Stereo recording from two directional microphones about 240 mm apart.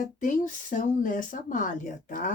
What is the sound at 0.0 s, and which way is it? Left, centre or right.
Speech, left.